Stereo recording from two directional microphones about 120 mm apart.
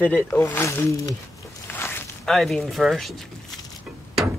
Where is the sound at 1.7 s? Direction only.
20° left (ahead or behind).